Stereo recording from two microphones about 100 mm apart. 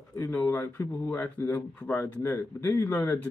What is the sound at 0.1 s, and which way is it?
Speech, 25° left (ahead or behind).